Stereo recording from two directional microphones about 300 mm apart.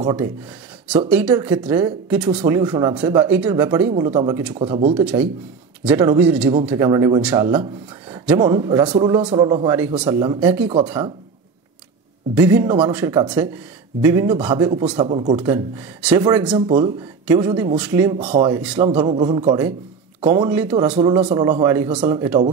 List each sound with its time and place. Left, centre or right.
0.0 s speech: centre
4.9 s speech: centre
12.4 s speech: centre
19.0 s speech: centre
20.4 s speech: centre